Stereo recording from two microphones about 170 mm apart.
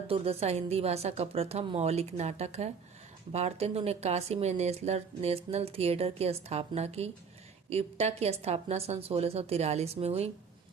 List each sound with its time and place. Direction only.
0.1 s speech: 35° right (ahead or behind)